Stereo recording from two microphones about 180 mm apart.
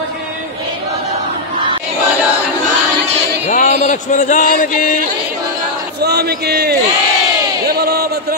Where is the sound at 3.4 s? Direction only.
40° left (ahead or behind).